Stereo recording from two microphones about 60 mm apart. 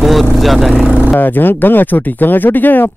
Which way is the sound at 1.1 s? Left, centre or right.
Left.